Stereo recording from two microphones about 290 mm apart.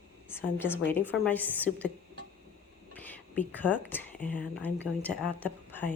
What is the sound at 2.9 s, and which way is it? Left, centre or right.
Whispering, centre.